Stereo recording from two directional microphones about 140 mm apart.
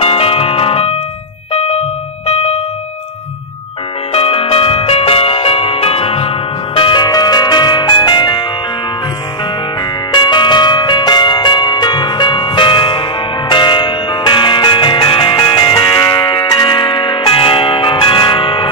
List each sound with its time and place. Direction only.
0.0 s music: 45° left (ahead or behind)
4.1 s music: 45° left (ahead or behind)
10.1 s music: 35° left (ahead or behind)